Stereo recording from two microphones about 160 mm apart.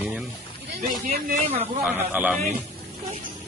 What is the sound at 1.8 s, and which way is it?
Speech, 10° right (ahead or behind).